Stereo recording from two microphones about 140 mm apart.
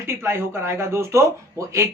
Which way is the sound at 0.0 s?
20° right (ahead or behind).